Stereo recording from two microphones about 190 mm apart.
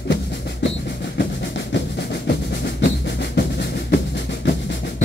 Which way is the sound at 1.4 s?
65° left (ahead or behind).